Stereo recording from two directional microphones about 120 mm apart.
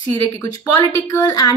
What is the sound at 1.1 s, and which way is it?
Speech, 30° left (ahead or behind).